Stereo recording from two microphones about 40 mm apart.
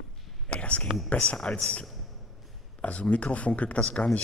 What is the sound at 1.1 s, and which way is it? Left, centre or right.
Speech, left.